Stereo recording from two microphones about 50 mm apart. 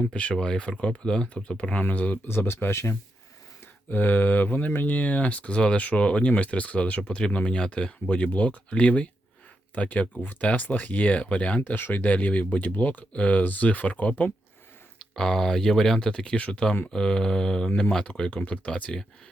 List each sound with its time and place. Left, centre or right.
0.0 s speech: left
1.7 s speech: left
2.2 s speech: left
3.8 s speech: left
11.6 s speech: left
15.1 s speech: centre